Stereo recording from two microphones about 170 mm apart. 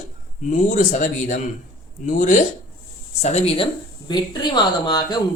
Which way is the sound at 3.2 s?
35° left (ahead or behind).